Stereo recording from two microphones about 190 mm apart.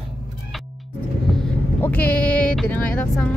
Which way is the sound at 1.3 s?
5° left (ahead or behind).